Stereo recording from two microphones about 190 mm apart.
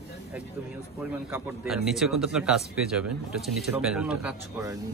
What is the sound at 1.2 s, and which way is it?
Speech, 10° right (ahead or behind).